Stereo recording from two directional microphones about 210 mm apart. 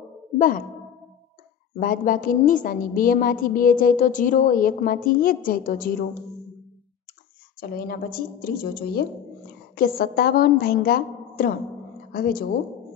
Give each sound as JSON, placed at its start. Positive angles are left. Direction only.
{"t": 0.4, "sound": "a child's voice", "side_deg": 40}
{"t": 1.8, "sound": "a woman's voice", "side_deg": 40}
{"t": 7.6, "sound": "a woman's voice", "side_deg": 45}